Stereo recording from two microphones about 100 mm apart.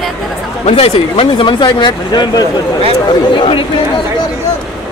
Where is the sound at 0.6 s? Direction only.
85° left.